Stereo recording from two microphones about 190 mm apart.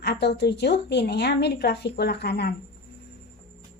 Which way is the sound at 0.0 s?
60° left (ahead or behind).